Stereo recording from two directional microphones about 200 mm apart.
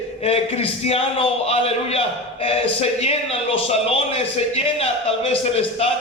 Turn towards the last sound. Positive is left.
turn(degrees=30)  # may be behind; listen again after turning